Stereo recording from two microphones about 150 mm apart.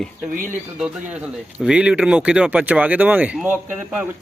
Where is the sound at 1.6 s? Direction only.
5° right (ahead or behind).